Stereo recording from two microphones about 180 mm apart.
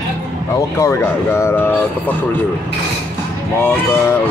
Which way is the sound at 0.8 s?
15° left (ahead or behind).